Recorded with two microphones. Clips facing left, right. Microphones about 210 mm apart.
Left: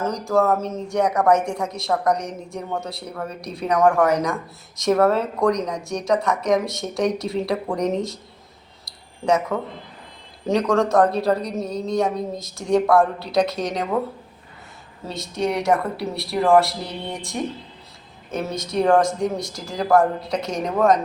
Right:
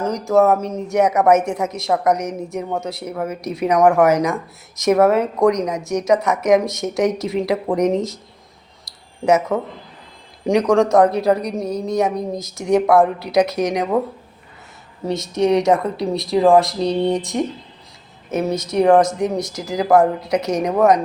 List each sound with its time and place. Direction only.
0.0 s a woman's voice: 20° right (ahead or behind)
9.2 s a woman's voice: 20° right (ahead or behind)
15.0 s a woman's voice: 20° right (ahead or behind)